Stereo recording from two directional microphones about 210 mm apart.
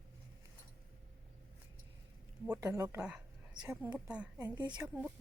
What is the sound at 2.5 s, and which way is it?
A woman's voice, 15° right (ahead or behind).